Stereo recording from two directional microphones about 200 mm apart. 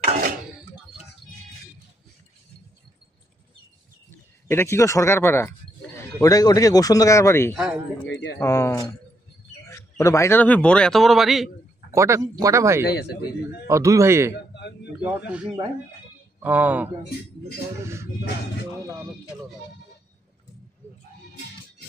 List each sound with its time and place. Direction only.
4.5 s speech: 10° left (ahead or behind)
7.5 s a man's voice: 5° right (ahead or behind)
8.4 s a man's voice: 15° left (ahead or behind)
11.9 s speech: 15° right (ahead or behind)
12.8 s a man's voice: 55° left (ahead or behind)
13.7 s speech: 15° right (ahead or behind)
14.5 s a sound: 60° left (ahead or behind)
15.0 s a man's voice: 5° right (ahead or behind)